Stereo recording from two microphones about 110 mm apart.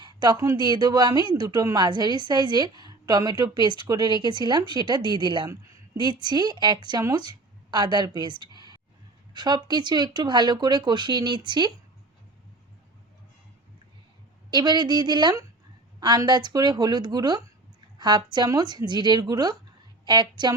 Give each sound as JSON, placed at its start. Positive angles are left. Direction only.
{"t": 0.0, "sound": "a sound", "side_deg": -40}
{"t": 0.5, "sound": "a woman's voice", "side_deg": -40}
{"t": 14.5, "sound": "a woman's voice", "side_deg": -40}